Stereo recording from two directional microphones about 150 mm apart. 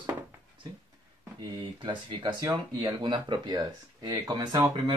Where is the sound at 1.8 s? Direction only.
25° right (ahead or behind).